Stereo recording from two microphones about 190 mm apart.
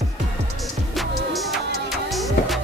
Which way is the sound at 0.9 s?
Centre (ahead or behind).